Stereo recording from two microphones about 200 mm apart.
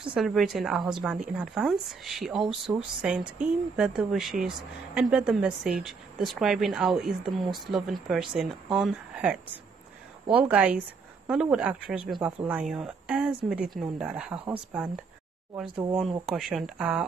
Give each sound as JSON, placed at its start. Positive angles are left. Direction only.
{"t": 0.1, "sound": "speech", "side_deg": 0}
{"t": 15.7, "sound": "speech", "side_deg": -20}
{"t": 16.0, "sound": "speech", "side_deg": 0}